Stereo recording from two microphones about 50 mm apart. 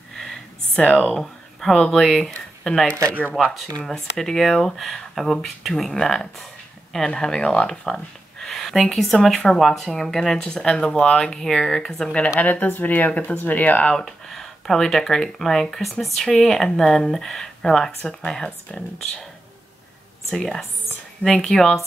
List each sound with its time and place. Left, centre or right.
0.9 s speech: centre
12.4 s speech: left
13.9 s speech: centre
20.2 s speech: centre